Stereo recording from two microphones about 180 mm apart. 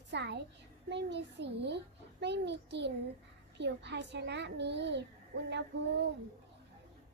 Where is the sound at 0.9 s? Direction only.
70° right (ahead or behind).